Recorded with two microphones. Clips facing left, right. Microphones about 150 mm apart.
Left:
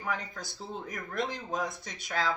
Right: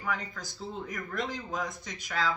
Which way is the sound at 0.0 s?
25° left (ahead or behind).